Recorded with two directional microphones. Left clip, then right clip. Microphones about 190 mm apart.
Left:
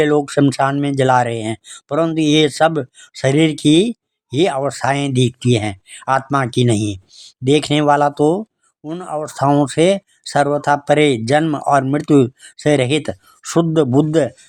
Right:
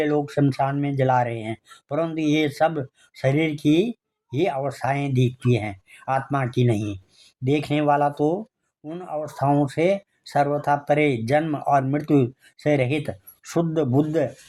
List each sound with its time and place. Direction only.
0.0 s speech: 35° left (ahead or behind)